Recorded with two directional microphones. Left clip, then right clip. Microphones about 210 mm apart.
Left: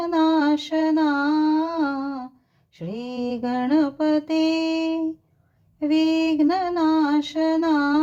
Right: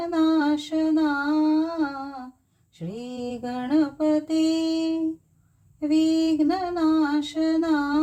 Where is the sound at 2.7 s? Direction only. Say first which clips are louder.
Left 4 dB; 20° left (ahead or behind).